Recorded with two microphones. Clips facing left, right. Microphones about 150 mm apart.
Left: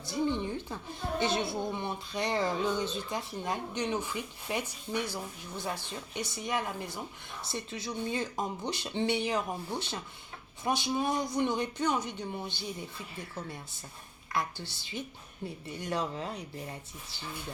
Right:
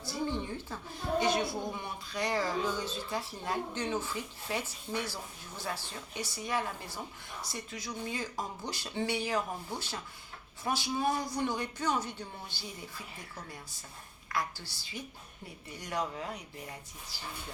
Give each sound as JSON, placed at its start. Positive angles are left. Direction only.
{"t": 0.0, "sound": "a sound", "side_deg": 20}
{"t": 1.2, "sound": "speech", "side_deg": 25}
{"t": 14.3, "sound": "speech", "side_deg": 25}